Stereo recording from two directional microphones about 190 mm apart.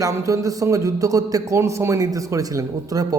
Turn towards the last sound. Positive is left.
turn(degrees=-20)  # may be behind; listen again after turning